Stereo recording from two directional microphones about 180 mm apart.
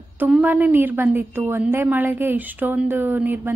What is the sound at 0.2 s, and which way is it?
A woman's voice, 10° right (ahead or behind).